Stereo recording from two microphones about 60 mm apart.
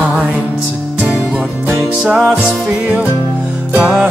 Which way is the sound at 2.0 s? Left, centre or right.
Centre.